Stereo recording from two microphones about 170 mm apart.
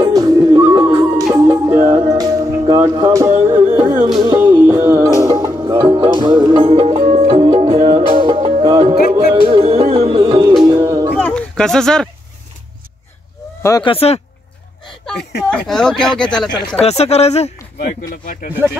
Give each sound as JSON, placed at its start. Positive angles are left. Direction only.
{"t": 0.0, "sound": "music", "side_deg": -20}
{"t": 11.1, "sound": "a sound", "side_deg": 5}
{"t": 13.6, "sound": "speech", "side_deg": 20}
{"t": 13.8, "sound": "speech", "side_deg": 35}
{"t": 15.5, "sound": "speech", "side_deg": 5}
{"t": 16.8, "sound": "speech", "side_deg": 40}
{"t": 18.1, "sound": "speech", "side_deg": 55}